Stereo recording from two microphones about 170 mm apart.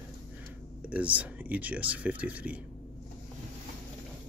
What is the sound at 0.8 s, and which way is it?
Speech, 10° right (ahead or behind).